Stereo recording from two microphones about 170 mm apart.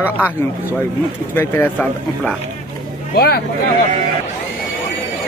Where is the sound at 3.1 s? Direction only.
65° left (ahead or behind).